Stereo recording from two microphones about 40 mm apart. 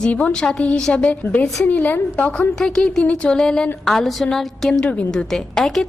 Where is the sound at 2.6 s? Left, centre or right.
Centre.